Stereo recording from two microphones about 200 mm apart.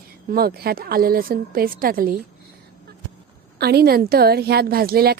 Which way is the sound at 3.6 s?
50° right (ahead or behind).